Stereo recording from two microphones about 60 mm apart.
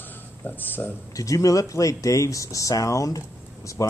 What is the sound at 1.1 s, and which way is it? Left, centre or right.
Speech, left.